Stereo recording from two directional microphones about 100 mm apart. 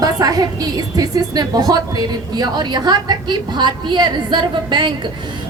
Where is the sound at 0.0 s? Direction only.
40° right (ahead or behind).